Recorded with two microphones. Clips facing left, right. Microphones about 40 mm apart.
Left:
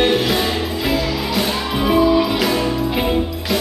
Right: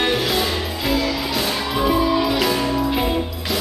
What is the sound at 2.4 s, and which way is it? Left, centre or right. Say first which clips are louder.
Music: left 1 dB; centre.